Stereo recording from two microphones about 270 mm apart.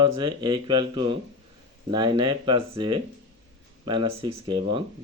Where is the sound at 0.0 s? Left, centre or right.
Centre.